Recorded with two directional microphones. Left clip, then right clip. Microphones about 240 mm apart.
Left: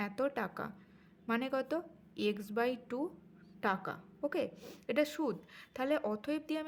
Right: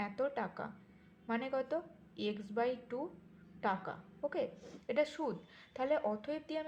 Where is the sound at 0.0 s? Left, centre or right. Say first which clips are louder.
Left 1 dB; left.